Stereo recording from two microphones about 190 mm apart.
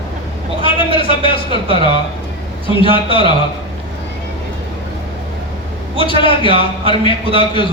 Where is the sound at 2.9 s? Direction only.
25° left (ahead or behind).